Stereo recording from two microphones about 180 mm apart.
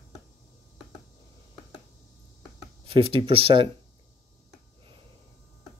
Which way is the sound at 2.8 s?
30° right (ahead or behind).